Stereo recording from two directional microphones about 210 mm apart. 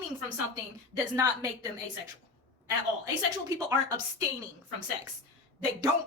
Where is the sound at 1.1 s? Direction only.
15° right (ahead or behind).